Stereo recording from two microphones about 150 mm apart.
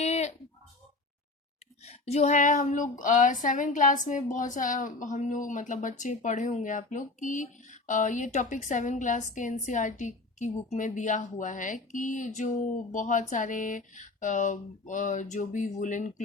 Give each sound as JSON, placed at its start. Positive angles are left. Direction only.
{"t": 0.0, "sound": "a sound", "side_deg": 50}
{"t": 1.8, "sound": "female singing", "side_deg": 45}
{"t": 3.0, "sound": "a woman's voice", "side_deg": 60}